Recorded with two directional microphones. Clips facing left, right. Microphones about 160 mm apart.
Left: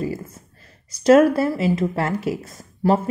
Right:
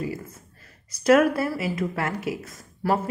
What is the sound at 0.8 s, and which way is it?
Speech, 25° left (ahead or behind).